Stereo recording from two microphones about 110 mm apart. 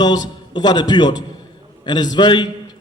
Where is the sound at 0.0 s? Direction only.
40° left (ahead or behind).